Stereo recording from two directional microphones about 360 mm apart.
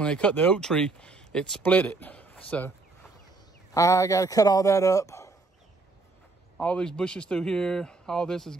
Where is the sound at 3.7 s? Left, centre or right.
Centre.